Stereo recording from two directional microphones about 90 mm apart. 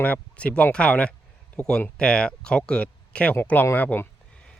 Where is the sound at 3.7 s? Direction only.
20° left (ahead or behind).